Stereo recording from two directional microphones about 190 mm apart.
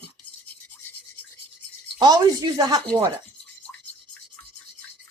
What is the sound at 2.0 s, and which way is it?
Speech, 20° right (ahead or behind).